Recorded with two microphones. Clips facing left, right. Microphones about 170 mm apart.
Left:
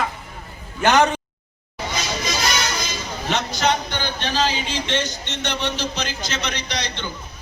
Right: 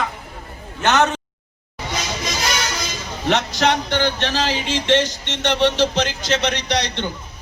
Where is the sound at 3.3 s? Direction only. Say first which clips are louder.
Right 3 dB; 75° right (ahead or behind).